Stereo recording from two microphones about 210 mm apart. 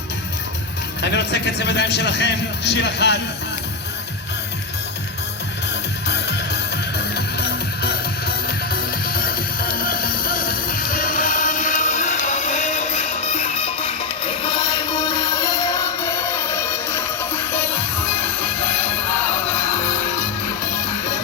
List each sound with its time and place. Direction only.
1.0 s a man's voice: 55° left (ahead or behind)
6.1 s music: 50° left (ahead or behind); by 18.5 s 10° left (ahead or behind)